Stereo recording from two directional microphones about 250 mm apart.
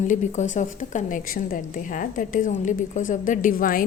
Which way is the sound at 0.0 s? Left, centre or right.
Left.